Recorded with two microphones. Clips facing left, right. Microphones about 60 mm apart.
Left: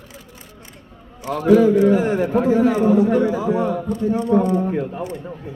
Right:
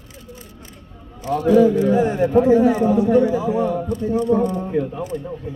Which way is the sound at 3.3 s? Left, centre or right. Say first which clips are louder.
Even; left.